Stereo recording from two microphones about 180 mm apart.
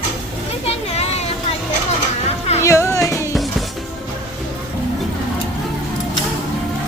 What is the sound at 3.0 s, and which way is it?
Music, 15° left (ahead or behind).